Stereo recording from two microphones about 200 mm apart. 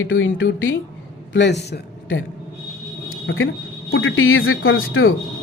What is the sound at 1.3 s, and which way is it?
Speech, 60° left (ahead or behind).